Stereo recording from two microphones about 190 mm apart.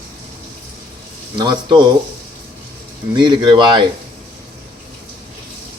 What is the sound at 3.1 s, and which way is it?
Speech, 25° right (ahead or behind).